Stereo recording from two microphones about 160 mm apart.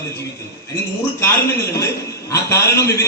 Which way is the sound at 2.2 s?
20° left (ahead or behind).